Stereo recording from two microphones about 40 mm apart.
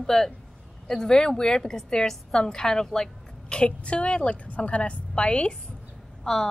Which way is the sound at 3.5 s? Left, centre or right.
Left.